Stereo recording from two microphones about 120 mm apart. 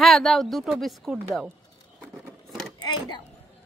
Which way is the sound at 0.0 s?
Centre (ahead or behind).